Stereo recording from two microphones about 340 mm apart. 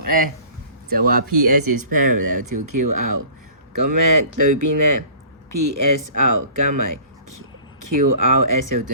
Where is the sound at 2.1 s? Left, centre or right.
Right.